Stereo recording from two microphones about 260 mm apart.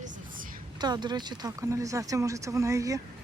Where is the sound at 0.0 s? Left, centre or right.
Right.